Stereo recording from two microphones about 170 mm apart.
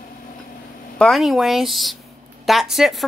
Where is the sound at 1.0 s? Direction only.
Centre (ahead or behind).